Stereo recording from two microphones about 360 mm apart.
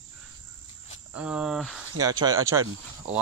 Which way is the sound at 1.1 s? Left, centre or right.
Centre.